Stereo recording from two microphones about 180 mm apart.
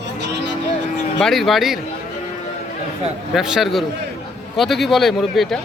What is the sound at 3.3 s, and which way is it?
A man's voice, centre (ahead or behind).